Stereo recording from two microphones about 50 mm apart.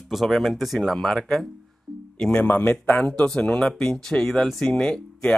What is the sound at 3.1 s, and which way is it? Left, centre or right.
Speech, centre.